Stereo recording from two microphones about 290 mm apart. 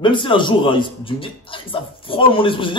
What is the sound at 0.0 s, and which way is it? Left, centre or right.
A man's voice, centre.